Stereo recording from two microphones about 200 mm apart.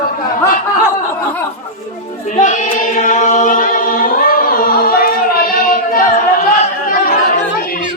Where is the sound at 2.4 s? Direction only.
40° left (ahead or behind).